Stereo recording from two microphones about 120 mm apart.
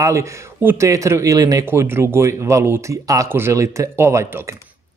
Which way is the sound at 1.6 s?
20° right (ahead or behind).